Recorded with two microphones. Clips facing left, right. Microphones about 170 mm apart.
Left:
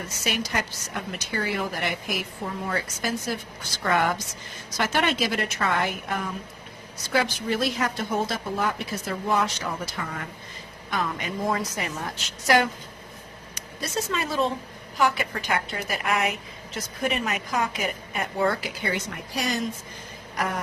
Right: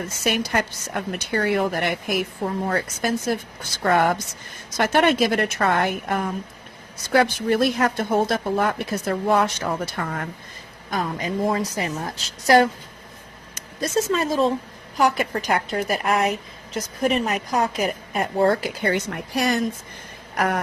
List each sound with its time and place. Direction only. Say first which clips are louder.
0.3 s speech: right 6 dB; 55° right (ahead or behind)
10.9 s a woman's voice: right 4 dB; 35° right (ahead or behind); by 19.6 s 60° right (ahead or behind)
20.3 s a sound: right 6 dB; 65° right (ahead or behind)